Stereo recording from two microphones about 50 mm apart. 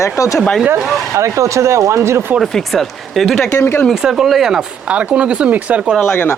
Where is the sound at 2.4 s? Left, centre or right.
Centre.